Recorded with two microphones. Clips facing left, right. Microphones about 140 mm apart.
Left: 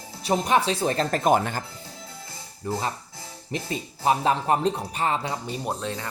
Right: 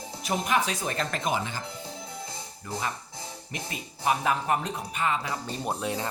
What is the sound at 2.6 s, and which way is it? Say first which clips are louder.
Speech: left 5 dB; 30° left (ahead or behind).